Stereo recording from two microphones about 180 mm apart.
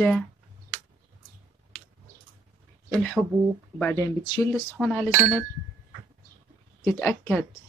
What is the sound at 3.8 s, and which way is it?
Speech, 15° left (ahead or behind).